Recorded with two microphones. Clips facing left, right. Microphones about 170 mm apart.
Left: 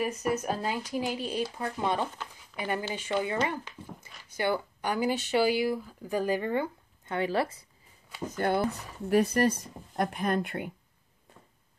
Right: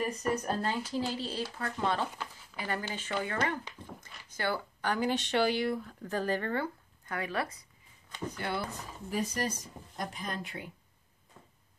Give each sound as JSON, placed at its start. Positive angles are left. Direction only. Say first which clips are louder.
{"t": 0.0, "sound": "speech", "louder": "left 2 dB", "side_deg": 5}
{"t": 8.4, "sound": "speech", "louder": "left 9 dB", "side_deg": 50}
{"t": 9.1, "sound": "speech", "louder": "left 9 dB", "side_deg": 60}